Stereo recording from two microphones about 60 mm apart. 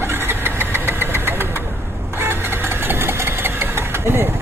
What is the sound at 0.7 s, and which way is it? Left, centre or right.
Engine, right.